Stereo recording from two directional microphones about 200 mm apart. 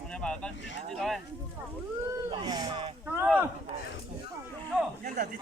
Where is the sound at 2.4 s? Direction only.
20° right (ahead or behind).